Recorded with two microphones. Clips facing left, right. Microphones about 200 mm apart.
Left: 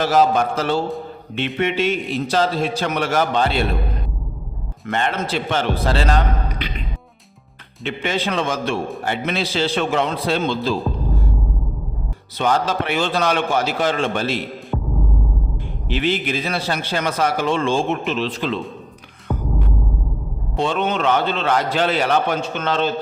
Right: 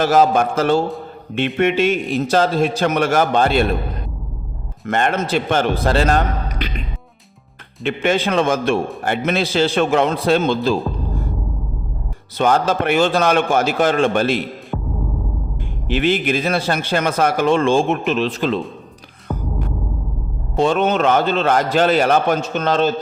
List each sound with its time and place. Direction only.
0.0 s speech: 50° right (ahead or behind)
4.9 s speech: 50° right (ahead or behind)
7.9 s speech: 50° right (ahead or behind)
12.4 s speech: 50° right (ahead or behind)
14.7 s music: 5° left (ahead or behind)
15.9 s speech: 50° right (ahead or behind)
20.6 s speech: 45° right (ahead or behind)